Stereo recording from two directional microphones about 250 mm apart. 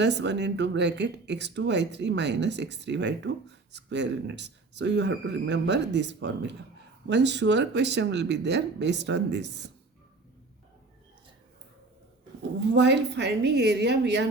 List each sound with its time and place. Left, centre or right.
0.0 s speech: right
12.7 s a woman's voice: right